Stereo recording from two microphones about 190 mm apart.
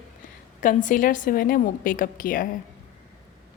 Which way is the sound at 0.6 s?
45° left (ahead or behind).